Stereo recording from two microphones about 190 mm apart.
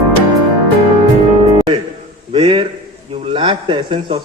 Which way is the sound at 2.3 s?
30° right (ahead or behind).